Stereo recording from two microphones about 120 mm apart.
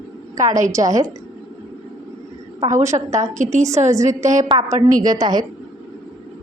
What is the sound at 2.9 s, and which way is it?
Speech, 45° right (ahead or behind).